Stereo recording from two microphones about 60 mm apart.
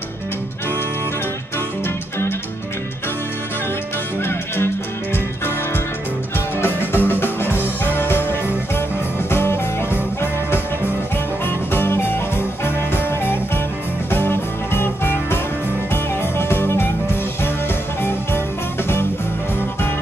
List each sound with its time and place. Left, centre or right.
4.2 s music: left
6.3 s music: left
11.4 s music: left